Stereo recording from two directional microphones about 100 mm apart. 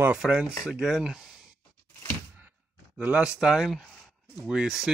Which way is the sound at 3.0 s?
10° right (ahead or behind).